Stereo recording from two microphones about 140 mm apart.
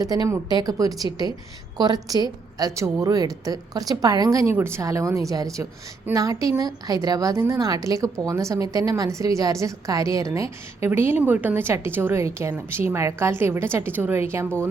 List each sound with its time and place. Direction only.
0.0 s a woman's voice: 25° right (ahead or behind)